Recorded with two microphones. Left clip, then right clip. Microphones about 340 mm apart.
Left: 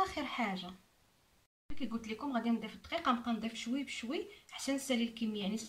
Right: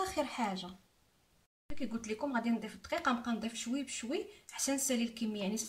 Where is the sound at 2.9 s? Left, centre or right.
Left.